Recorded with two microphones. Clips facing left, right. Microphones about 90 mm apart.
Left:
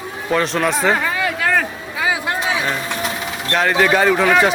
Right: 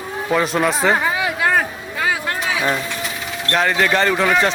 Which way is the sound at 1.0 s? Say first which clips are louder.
Right 1 dB; 20° right (ahead or behind).